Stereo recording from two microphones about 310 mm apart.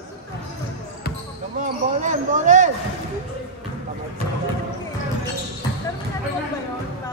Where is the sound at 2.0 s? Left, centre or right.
Right.